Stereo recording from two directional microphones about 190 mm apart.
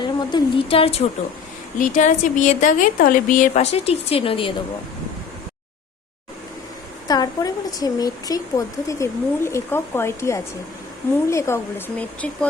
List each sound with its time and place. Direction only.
0.2 s speech: 25° left (ahead or behind)
1.8 s a woman's voice: 40° left (ahead or behind)
7.1 s speech: 20° left (ahead or behind)